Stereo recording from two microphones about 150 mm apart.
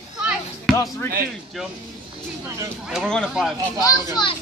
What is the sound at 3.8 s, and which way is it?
Speech, 30° left (ahead or behind).